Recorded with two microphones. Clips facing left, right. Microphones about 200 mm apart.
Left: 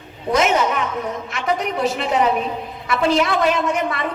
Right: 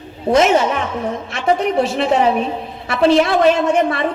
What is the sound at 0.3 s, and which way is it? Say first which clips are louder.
A man's voice: right 4 dB; 30° right (ahead or behind).